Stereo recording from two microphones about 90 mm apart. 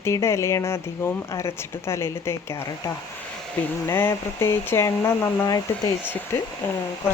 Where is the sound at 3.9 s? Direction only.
25° left (ahead or behind).